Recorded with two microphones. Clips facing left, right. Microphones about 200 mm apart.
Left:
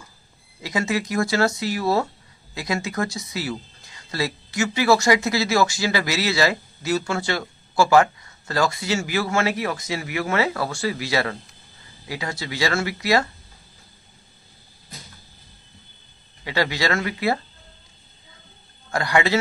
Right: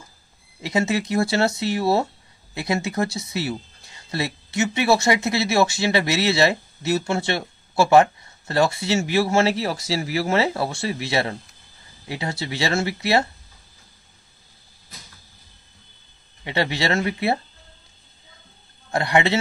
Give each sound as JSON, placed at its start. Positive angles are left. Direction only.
{"t": 0.6, "sound": "speech", "side_deg": -25}
{"t": 16.4, "sound": "speech", "side_deg": -25}
{"t": 18.9, "sound": "a man's voice", "side_deg": -25}